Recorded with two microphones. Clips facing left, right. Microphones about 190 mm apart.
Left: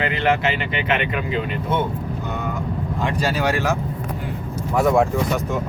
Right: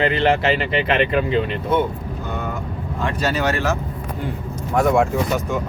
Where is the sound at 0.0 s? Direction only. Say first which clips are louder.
Right 3 dB; 30° right (ahead or behind).